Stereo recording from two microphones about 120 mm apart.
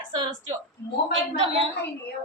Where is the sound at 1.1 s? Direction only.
45° right (ahead or behind).